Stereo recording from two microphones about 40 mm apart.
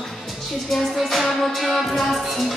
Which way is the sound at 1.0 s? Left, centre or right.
Centre.